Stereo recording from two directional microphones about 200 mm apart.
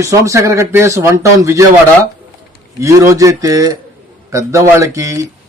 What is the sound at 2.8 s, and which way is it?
A man's voice, 15° right (ahead or behind).